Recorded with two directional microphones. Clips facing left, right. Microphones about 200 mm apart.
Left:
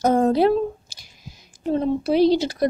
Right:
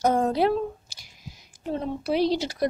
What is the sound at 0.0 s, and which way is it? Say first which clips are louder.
Speech: left 5 dB; 30° left (ahead or behind).